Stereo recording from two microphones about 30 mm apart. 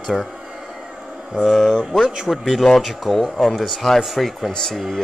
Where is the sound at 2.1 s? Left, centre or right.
Centre.